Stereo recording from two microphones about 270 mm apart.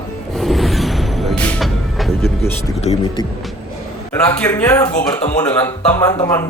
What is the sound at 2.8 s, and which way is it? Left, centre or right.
Speech, left.